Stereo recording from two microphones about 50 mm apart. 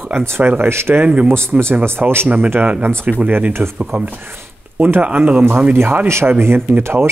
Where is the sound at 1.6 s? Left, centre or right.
Right.